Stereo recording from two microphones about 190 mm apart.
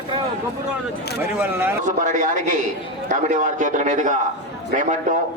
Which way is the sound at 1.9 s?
40° right (ahead or behind).